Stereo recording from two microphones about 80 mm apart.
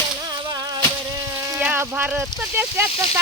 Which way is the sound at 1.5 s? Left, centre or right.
Centre.